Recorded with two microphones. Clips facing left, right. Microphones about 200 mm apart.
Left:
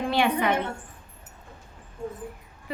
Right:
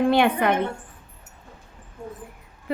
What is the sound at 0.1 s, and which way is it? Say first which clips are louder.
Speech: right 4 dB; 55° right (ahead or behind).